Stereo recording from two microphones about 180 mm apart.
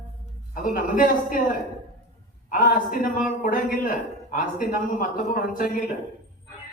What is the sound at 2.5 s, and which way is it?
A man's voice, 50° left (ahead or behind).